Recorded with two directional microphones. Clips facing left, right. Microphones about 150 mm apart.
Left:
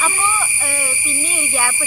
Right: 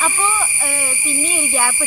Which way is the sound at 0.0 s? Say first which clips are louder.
Right 1 dB; centre (ahead or behind).